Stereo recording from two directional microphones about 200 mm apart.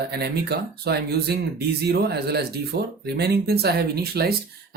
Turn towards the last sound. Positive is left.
turn(degrees=-50)  # may be behind; listen again after turning